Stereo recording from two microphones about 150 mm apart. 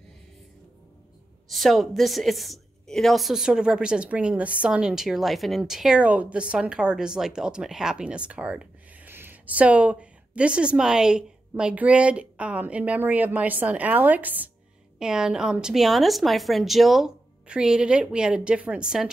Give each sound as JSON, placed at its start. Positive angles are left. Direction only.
{"t": 1.5, "sound": "a woman's voice", "side_deg": 0}